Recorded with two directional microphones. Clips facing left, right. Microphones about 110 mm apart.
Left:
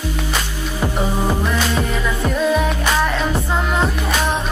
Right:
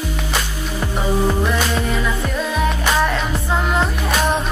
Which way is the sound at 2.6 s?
Centre (ahead or behind).